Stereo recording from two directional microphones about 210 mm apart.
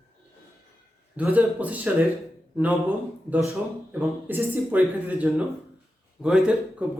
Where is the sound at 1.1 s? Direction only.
5° right (ahead or behind).